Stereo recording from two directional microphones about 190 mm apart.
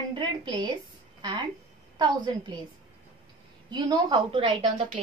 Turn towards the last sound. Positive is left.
turn(degrees=-25)  # may be behind; listen again after turning